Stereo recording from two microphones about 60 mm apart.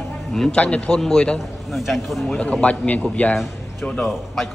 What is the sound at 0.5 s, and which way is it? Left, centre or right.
Speech, left.